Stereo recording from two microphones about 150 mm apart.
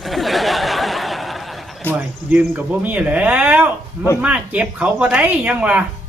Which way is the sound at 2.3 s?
15° right (ahead or behind).